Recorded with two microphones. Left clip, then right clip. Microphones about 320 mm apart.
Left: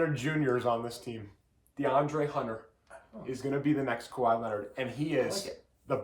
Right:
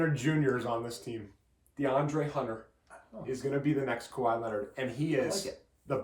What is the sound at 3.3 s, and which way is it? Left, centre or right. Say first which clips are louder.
Speech: left 1 dB; centre.